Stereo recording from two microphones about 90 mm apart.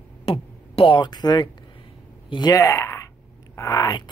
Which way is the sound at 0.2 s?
90° left.